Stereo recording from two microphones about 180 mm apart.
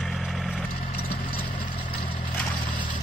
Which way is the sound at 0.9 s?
55° left (ahead or behind).